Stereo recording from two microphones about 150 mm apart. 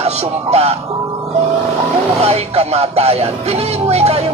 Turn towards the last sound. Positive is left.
turn(degrees=-45)  # may be behind; listen again after turning